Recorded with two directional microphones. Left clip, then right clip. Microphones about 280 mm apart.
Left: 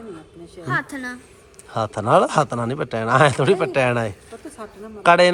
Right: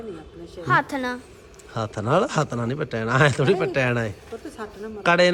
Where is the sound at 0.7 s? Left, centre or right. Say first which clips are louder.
Right 4 dB; right.